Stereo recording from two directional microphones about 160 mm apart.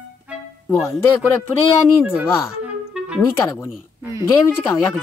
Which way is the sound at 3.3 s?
15° left (ahead or behind).